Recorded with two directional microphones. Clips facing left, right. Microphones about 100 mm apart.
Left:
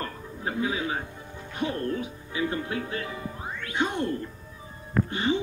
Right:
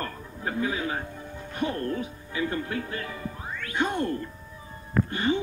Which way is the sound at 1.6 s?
50° right (ahead or behind).